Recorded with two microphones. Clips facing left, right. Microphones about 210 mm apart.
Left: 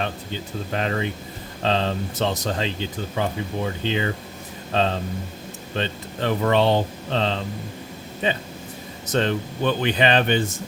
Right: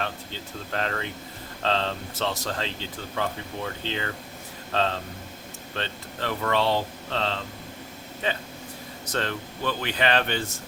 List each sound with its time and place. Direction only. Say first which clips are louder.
0.7 s speech: left 5 dB; 15° left (ahead or behind)